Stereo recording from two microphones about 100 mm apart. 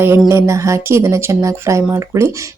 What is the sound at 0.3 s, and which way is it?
Speech, 30° right (ahead or behind).